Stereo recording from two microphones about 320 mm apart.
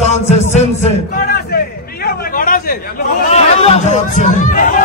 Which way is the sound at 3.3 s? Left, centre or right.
Centre.